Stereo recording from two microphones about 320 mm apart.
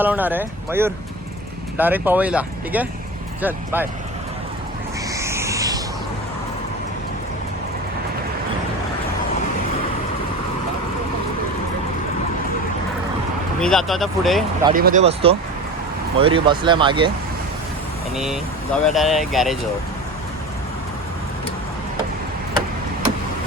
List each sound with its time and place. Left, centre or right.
0.0 s speech: centre
5.1 s a sound: centre
13.6 s speech: centre
14.7 s speech: right
18.2 s speech: centre